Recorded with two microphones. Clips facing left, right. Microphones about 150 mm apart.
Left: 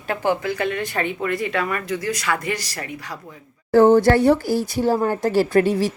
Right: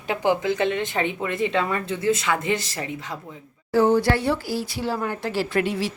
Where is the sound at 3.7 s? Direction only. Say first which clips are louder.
Left 6 dB; 50° left (ahead or behind).